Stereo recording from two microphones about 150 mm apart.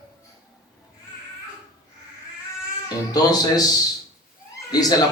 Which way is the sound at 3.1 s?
25° left (ahead or behind).